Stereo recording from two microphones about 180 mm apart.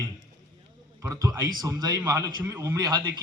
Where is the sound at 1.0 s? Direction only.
20° right (ahead or behind).